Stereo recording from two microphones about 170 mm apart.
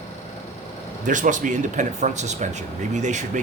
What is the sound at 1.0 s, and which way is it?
Speech, 50° right (ahead or behind).